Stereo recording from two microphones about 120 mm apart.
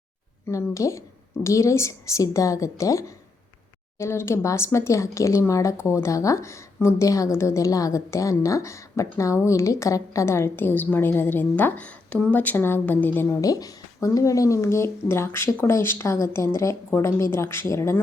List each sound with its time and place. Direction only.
0.4 s speech: 25° left (ahead or behind)
13.4 s speech: 30° left (ahead or behind)